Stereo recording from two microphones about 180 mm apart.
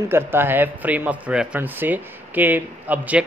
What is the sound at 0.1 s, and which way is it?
Speech, 10° right (ahead or behind).